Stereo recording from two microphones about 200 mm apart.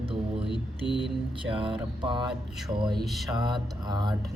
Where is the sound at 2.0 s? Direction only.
25° right (ahead or behind).